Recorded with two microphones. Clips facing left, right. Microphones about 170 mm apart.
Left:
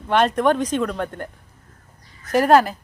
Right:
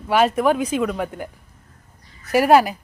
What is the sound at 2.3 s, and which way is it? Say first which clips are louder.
Speech: right 1 dB; 10° right (ahead or behind).